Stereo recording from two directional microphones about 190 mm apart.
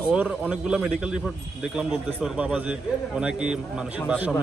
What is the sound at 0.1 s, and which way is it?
A man's voice, 5° right (ahead or behind).